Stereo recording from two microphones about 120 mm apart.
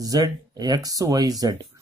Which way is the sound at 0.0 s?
30° right (ahead or behind).